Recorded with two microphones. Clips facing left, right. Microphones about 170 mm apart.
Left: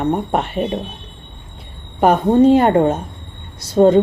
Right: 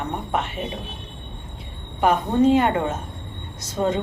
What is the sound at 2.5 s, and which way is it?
A woman's voice, 40° left (ahead or behind).